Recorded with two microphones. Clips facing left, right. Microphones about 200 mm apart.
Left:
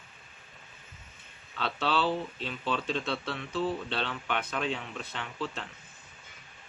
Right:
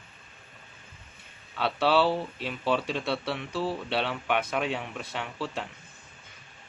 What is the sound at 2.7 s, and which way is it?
Speech, 10° right (ahead or behind).